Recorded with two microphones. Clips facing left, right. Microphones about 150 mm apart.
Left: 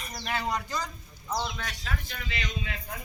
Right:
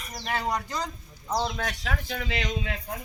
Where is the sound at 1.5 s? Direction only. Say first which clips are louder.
Right 6 dB; 45° right (ahead or behind).